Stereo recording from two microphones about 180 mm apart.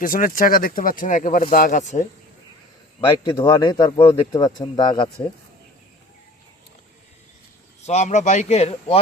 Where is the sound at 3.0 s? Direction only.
15° left (ahead or behind).